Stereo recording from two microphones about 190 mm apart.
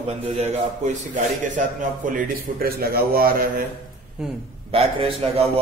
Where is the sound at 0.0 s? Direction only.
35° right (ahead or behind); by 3.6 s 50° right (ahead or behind).